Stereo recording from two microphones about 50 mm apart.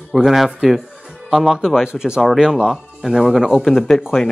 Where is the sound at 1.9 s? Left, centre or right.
Centre.